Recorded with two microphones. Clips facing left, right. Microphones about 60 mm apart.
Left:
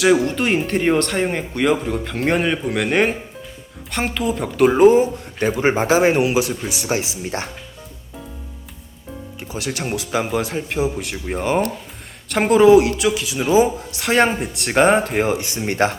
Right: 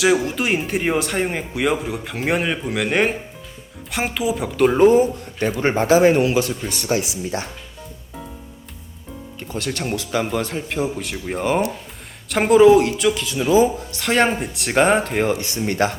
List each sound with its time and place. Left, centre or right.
0.0 s a man's voice: centre
5.9 s speech: left
6.2 s a man's voice: centre
7.3 s speech: left
9.4 s speech: centre
15.4 s speech: left